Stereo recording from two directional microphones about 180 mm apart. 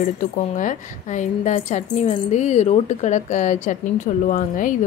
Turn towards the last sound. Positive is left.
turn(degrees=45)  # may be behind; listen again after turning